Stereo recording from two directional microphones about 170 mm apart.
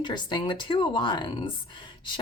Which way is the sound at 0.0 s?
25° left (ahead or behind).